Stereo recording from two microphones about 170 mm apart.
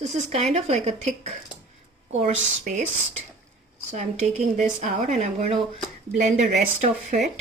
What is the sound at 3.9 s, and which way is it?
Speech, 40° right (ahead or behind).